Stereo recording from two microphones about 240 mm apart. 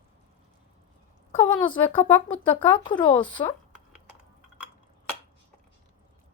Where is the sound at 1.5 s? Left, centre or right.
Left.